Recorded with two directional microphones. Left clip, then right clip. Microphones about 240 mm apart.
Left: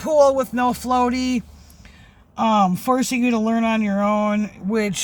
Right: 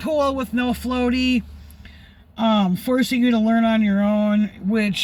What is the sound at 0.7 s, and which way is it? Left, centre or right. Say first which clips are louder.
Music: left 3 dB; left.